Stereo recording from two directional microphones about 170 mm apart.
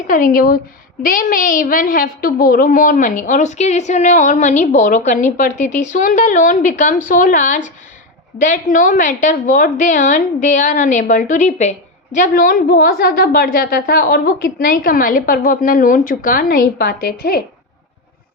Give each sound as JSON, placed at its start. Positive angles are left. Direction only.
{"t": 0.1, "sound": "a woman's voice", "side_deg": 50}